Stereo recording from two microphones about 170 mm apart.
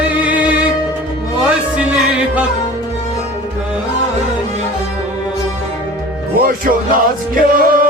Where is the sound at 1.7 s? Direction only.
10° right (ahead or behind).